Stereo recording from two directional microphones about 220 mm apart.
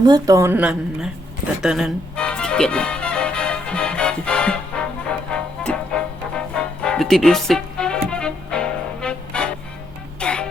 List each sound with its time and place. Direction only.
0.0 s a woman's voice: 15° right (ahead or behind)
1.6 s music: centre (ahead or behind)